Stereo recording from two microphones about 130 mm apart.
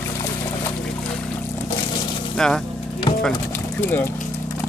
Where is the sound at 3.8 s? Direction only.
15° left (ahead or behind).